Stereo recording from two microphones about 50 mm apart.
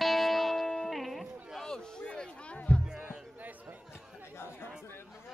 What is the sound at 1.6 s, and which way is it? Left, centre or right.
Music, centre.